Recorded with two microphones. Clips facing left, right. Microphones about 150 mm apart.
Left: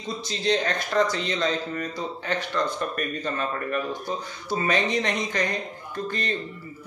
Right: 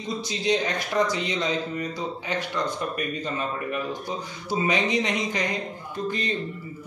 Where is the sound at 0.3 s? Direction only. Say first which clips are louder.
Left 1 dB; 15° right (ahead or behind).